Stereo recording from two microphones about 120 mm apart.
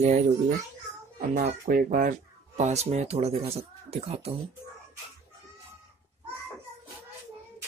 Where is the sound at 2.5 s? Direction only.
75° right (ahead or behind); by 4.3 s 55° right (ahead or behind).